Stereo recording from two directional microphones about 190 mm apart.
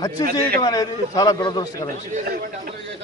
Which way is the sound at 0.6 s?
20° left (ahead or behind).